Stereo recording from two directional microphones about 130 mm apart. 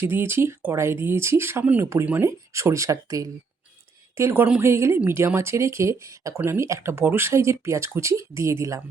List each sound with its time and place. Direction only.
0.0 s speech: 20° right (ahead or behind)